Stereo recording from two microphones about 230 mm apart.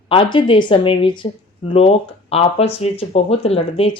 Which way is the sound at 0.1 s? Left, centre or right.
Left.